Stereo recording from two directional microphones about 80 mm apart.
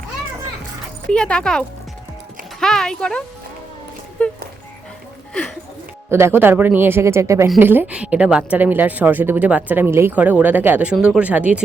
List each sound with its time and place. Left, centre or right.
1.1 s speech: centre
4.2 s music: centre
6.1 s speech: right
7.6 s a woman's voice: right